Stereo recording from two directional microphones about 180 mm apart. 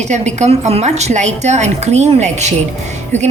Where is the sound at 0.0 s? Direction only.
40° right (ahead or behind).